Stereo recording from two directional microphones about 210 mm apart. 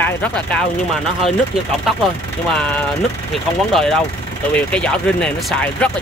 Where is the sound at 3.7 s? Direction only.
Centre (ahead or behind).